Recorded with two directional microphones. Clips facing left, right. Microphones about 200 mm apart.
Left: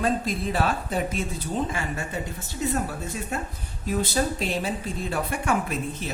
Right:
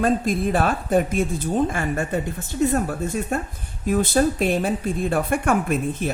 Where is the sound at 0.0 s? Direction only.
50° right (ahead or behind).